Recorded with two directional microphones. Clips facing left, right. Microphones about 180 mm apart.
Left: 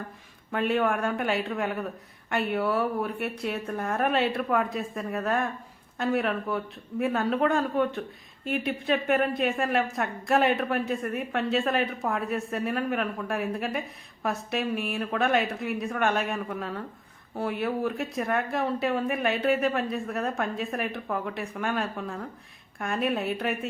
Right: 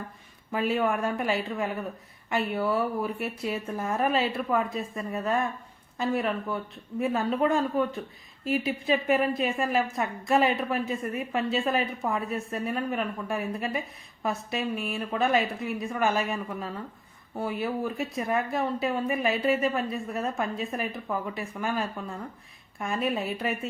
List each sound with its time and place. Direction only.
0.5 s speech: centre (ahead or behind)